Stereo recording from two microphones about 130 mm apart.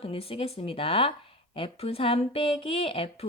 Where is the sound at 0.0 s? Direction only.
50° left (ahead or behind).